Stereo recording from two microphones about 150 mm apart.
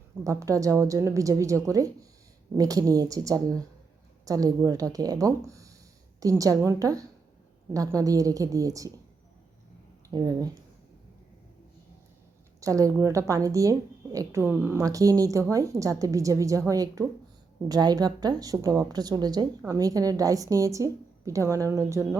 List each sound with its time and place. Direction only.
0.3 s a woman's voice: 20° right (ahead or behind)
10.1 s a woman's voice: 25° right (ahead or behind)
12.5 s a woman's voice: 20° right (ahead or behind)